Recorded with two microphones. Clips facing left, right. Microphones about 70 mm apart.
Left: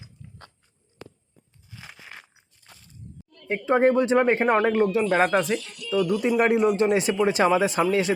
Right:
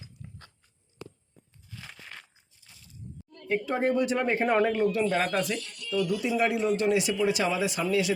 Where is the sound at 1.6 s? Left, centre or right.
Centre.